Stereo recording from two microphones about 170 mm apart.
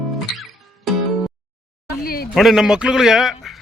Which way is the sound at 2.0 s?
60° left (ahead or behind).